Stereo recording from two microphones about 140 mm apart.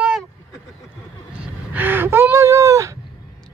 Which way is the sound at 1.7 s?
15° right (ahead or behind).